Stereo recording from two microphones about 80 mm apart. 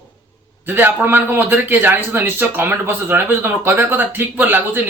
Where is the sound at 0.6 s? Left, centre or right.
Right.